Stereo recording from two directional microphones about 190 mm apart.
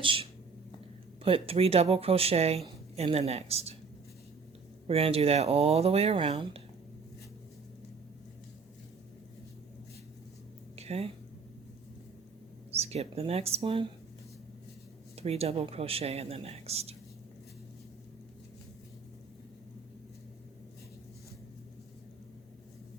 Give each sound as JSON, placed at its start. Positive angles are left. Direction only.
{"t": 0.0, "sound": "speech", "side_deg": -30}
{"t": 4.9, "sound": "speech", "side_deg": -30}
{"t": 10.8, "sound": "a sound", "side_deg": -35}
{"t": 12.7, "sound": "speech", "side_deg": -35}
{"t": 15.1, "sound": "speech", "side_deg": -35}